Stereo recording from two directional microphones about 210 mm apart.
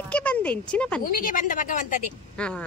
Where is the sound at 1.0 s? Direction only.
40° left (ahead or behind).